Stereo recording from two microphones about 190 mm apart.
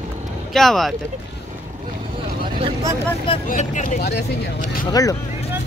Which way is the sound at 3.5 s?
45° left (ahead or behind).